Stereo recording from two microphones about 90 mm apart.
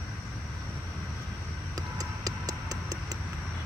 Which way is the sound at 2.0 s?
45° right (ahead or behind).